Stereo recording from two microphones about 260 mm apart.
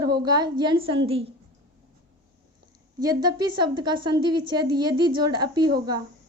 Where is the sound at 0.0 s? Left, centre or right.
Centre.